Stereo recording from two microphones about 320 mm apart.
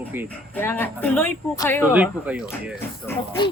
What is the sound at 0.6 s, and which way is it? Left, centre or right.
Speech, centre.